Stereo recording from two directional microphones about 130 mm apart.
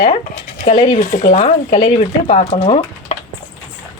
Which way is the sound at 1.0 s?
80° left.